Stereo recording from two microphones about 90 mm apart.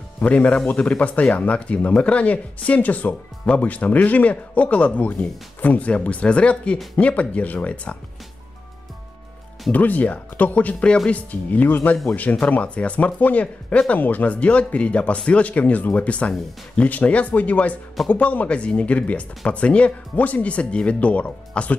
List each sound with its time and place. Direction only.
0.2 s speech: 15° left (ahead or behind)
9.7 s speech: 20° left (ahead or behind)